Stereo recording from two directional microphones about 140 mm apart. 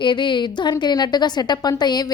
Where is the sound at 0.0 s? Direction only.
35° left (ahead or behind).